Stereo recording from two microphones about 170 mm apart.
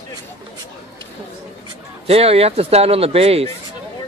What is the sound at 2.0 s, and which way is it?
A man's voice, 35° right (ahead or behind).